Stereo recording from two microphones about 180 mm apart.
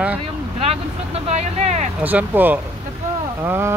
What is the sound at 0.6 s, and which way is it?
Speech, 35° right (ahead or behind).